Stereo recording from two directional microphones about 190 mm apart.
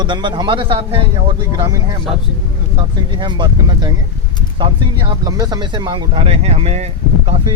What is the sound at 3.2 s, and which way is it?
Speech, 25° right (ahead or behind).